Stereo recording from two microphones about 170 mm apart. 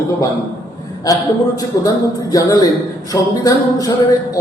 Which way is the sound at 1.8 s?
20° left (ahead or behind).